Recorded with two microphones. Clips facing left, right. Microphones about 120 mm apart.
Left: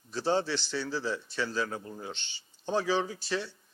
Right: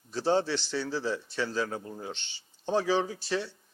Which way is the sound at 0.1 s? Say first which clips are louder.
Right 2 dB; 30° right (ahead or behind).